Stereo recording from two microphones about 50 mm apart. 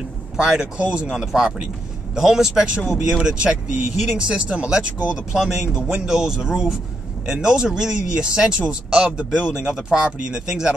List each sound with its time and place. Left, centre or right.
0.4 s speech: centre
1.1 s speech: centre
5.4 s speech: centre